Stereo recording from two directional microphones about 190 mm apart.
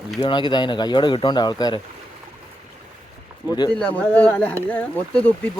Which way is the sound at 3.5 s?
20° left (ahead or behind).